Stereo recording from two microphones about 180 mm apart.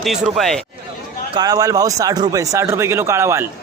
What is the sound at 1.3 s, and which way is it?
Speech, 20° right (ahead or behind).